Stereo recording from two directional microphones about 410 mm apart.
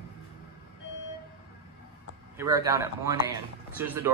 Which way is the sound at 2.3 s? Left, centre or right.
Centre.